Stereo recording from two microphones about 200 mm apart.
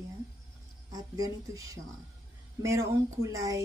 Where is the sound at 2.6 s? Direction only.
15° right (ahead or behind).